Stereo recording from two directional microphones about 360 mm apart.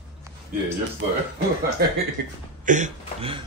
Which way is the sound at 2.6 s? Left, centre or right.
Centre.